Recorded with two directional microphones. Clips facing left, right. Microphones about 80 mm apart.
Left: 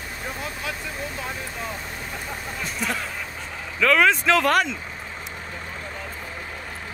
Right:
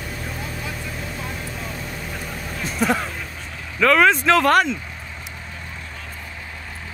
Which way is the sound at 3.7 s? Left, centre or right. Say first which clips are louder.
Right 3 dB; centre.